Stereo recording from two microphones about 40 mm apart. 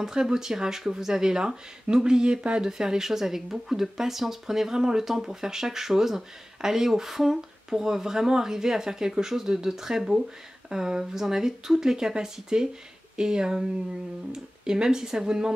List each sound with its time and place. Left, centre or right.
0.0 s speech: centre